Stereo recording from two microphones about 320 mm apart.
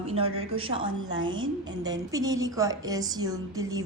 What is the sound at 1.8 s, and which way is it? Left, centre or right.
A woman's voice, centre.